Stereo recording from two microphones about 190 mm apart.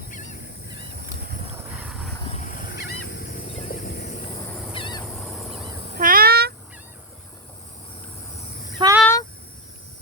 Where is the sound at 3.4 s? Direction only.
30° left (ahead or behind).